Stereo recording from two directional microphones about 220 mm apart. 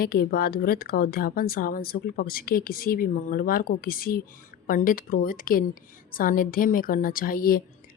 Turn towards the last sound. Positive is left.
turn(degrees=40)  # may be behind; listen again after turning